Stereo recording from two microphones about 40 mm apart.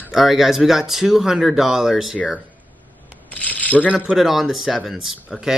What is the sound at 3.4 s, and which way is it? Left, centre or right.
Speech, left.